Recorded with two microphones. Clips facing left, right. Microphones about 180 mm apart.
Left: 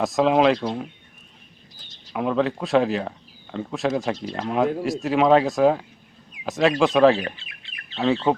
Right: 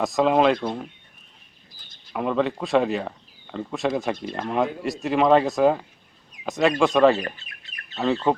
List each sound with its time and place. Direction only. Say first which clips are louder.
0.0 s speech: left 1 dB; centre (ahead or behind)
2.1 s speech: left 1 dB; centre (ahead or behind)
7.3 s bird: even; 40° right (ahead or behind)
7.9 s speech: left 1 dB; centre (ahead or behind)